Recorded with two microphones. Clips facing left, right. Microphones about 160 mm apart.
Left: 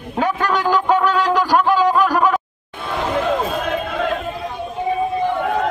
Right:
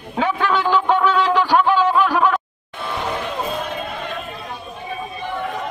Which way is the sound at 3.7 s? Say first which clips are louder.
Left 7 dB; 90° left.